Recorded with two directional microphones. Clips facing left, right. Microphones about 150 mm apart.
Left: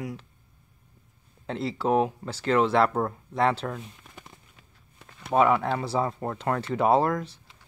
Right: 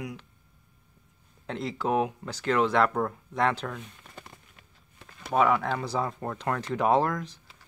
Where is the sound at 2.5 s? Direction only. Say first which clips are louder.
Left 2 dB; 30° left (ahead or behind).